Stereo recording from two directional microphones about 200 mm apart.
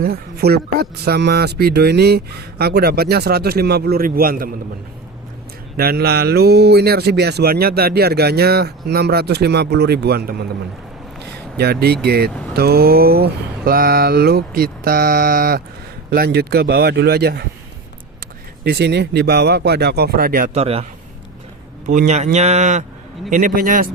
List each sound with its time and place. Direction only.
0.0 s speech: 50° right (ahead or behind)
5.7 s speech: 50° right (ahead or behind)
11.5 s speech: 50° right (ahead or behind)
18.6 s speech: 55° right (ahead or behind)
20.5 s speech: 30° right (ahead or behind)
21.8 s speech: 35° right (ahead or behind)